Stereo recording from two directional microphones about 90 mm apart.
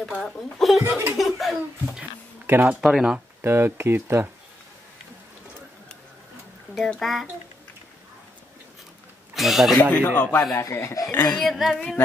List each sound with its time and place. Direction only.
0.0 s speech: centre (ahead or behind)
0.8 s laughter: 30° right (ahead or behind)
1.1 s speech: centre (ahead or behind)
2.4 s speech: 25° right (ahead or behind)
2.7 s speech: 10° right (ahead or behind)
3.4 s speech: 25° right (ahead or behind)
7.0 s speech: centre (ahead or behind)
9.3 s speech: centre (ahead or behind)
9.8 s speech: 15° left (ahead or behind)
10.5 s speech: 30° left (ahead or behind)
11.3 s speech: centre (ahead or behind)